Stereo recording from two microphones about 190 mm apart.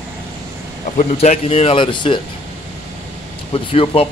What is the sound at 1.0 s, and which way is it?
Speech, 35° left (ahead or behind).